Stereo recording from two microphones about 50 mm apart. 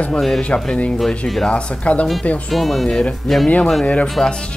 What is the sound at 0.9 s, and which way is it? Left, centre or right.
Speech, centre.